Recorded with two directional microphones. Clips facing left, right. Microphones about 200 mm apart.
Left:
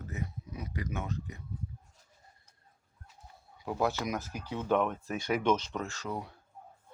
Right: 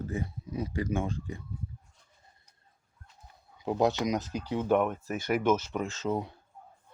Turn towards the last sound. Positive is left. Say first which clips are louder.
# right 6 dB
turn(degrees=-25)  # may be behind; listen again after turning